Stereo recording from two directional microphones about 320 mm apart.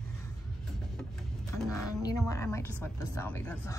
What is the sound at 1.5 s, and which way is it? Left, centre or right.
A woman's voice, centre.